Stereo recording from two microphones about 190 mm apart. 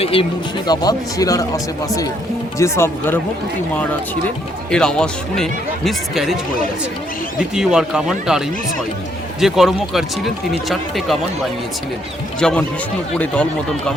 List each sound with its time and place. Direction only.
0.0 s speech: 30° left (ahead or behind); by 3.2 s 15° left (ahead or behind)
4.7 s speech: 5° left (ahead or behind)
12.4 s speech: 5° left (ahead or behind)